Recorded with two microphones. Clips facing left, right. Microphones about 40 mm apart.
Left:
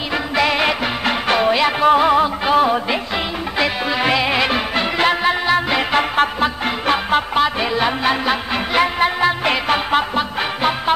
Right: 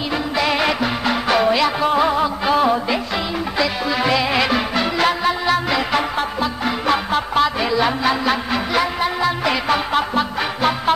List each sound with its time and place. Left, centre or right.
0.5 s music: centre
2.4 s music: centre
4.0 s music: left
6.9 s music: left
8.7 s music: left; by 10.7 s centre